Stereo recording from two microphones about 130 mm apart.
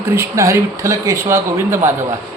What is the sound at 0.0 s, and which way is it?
Speech, 20° right (ahead or behind).